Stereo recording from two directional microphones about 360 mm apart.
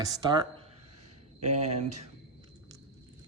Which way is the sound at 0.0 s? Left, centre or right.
Centre.